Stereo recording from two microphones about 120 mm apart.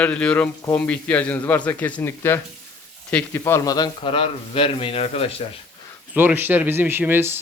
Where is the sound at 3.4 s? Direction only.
25° left (ahead or behind); by 5.3 s 55° left (ahead or behind).